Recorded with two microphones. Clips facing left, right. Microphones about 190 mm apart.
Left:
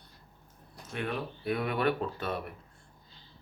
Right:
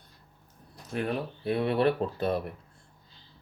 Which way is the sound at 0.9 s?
35° right (ahead or behind).